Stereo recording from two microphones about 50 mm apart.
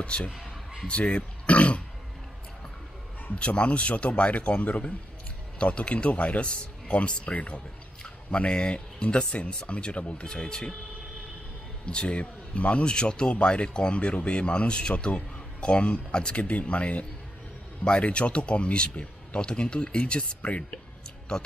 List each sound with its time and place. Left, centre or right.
0.0 s speech: left
0.3 s a sound: centre
0.8 s speech: left
3.3 s speech: left
11.8 s speech: left
21.4 s speech: centre